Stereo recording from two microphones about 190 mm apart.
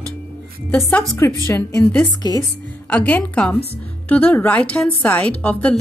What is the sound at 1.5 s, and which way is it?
Speech, 10° left (ahead or behind).